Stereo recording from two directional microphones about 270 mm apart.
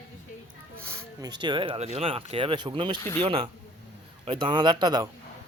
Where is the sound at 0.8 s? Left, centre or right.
Centre.